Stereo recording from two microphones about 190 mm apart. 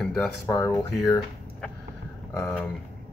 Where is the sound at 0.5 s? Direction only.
15° left (ahead or behind).